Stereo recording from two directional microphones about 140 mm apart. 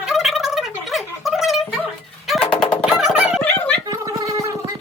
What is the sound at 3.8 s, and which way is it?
Gargling, 25° right (ahead or behind).